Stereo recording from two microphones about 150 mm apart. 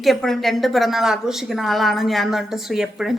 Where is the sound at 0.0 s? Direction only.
Centre (ahead or behind).